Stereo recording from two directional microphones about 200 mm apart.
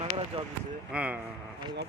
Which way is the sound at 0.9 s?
5° right (ahead or behind).